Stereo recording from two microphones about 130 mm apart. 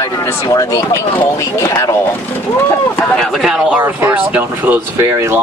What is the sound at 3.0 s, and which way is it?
Speech, 5° left (ahead or behind).